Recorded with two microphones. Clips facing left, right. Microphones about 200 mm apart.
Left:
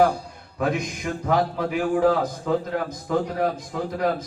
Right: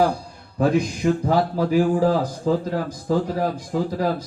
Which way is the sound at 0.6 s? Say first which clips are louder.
Right 6 dB; 35° right (ahead or behind).